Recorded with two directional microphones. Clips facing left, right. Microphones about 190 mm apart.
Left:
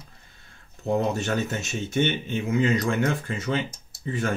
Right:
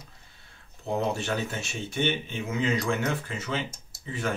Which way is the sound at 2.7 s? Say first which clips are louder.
Left 4 dB; 40° left (ahead or behind).